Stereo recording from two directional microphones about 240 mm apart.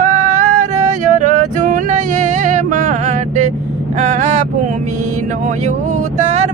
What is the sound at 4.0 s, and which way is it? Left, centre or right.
Vehicle, right.